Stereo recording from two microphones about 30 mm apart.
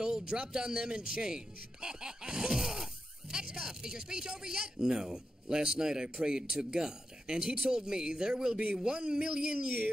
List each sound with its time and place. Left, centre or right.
0.0 s speech: right